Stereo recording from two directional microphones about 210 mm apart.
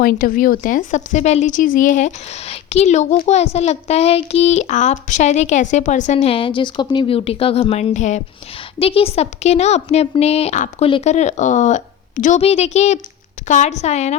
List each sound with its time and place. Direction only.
0.0 s speech: 45° left (ahead or behind)